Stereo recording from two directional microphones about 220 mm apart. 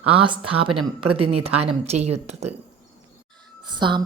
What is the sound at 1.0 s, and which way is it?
Speech, 90° right.